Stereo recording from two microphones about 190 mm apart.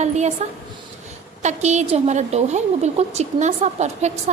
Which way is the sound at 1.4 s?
35° right (ahead or behind).